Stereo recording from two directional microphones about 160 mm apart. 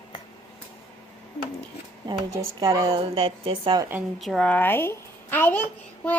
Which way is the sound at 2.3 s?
25° right (ahead or behind).